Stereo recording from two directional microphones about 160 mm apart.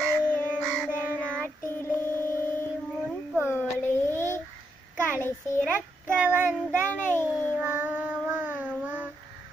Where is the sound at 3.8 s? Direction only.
15° left (ahead or behind).